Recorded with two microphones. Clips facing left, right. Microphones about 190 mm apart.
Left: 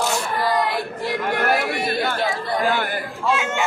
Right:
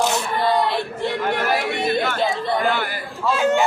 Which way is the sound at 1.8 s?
25° right (ahead or behind).